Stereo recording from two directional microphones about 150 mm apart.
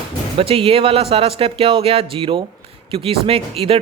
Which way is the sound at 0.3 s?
40° right (ahead or behind).